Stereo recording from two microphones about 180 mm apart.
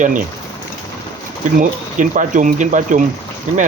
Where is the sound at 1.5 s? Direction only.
45° right (ahead or behind).